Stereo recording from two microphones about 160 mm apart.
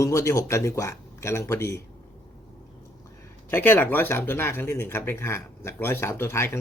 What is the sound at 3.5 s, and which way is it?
Speech, 15° left (ahead or behind).